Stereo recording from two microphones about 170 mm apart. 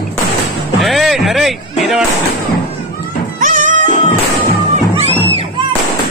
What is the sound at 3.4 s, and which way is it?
Music, 50° right (ahead or behind).